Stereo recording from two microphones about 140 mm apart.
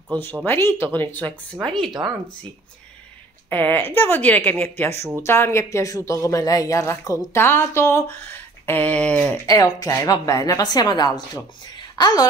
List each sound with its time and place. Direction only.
0.1 s a woman's voice: 15° left (ahead or behind)
3.4 s a woman's voice: 15° left (ahead or behind)
9.5 s speech: 25° left (ahead or behind)